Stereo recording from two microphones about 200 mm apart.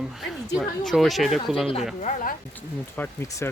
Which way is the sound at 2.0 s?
40° left (ahead or behind).